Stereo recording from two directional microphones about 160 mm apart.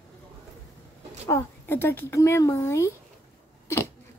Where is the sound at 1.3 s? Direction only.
15° left (ahead or behind).